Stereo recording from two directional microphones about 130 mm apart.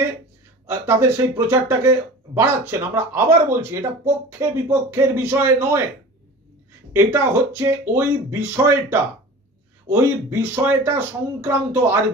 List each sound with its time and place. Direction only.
0.7 s speech: 15° right (ahead or behind)
6.9 s speech: 20° right (ahead or behind)